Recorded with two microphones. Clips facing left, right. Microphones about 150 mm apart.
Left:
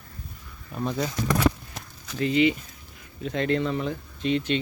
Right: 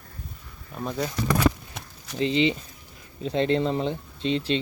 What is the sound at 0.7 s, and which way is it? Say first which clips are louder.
Speech: left 1 dB; centre (ahead or behind).